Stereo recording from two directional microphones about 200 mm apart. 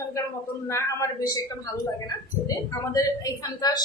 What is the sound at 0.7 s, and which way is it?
Speech, 15° left (ahead or behind).